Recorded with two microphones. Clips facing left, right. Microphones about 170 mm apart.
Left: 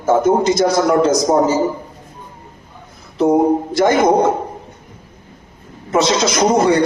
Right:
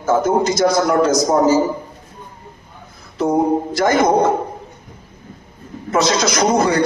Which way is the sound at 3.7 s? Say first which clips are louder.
Left 3 dB; 25° left (ahead or behind).